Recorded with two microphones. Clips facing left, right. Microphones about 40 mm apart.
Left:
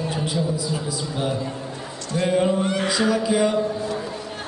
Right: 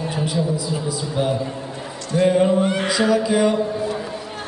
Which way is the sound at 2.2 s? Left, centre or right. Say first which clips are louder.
Right 4 dB; right.